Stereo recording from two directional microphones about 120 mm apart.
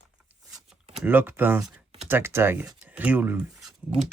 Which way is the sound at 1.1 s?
15° right (ahead or behind).